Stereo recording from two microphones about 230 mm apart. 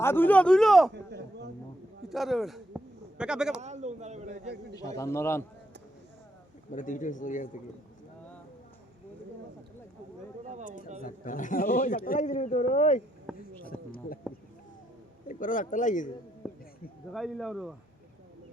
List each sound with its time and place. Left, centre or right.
0.0 s speech: centre
2.0 s a man's voice: centre
3.6 s a sound: right
4.8 s a man's voice: centre
6.7 s a man's voice: left
10.5 s speech: right
11.0 s a man's voice: left
13.3 s a sound: centre
13.7 s a sound: left
15.3 s a man's voice: left
17.1 s speech: centre